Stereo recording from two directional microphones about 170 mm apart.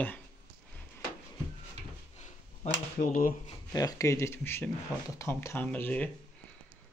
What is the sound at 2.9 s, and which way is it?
Speech, 50° left (ahead or behind).